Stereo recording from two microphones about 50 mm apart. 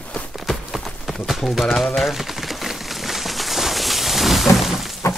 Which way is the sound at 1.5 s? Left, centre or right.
Centre.